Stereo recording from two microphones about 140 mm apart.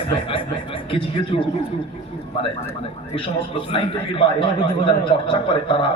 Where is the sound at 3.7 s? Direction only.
40° left (ahead or behind).